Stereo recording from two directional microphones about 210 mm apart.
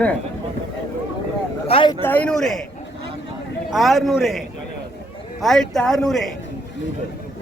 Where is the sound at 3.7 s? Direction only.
Centre (ahead or behind).